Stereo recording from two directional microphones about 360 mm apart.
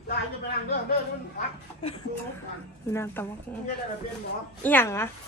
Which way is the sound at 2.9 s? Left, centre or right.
Centre.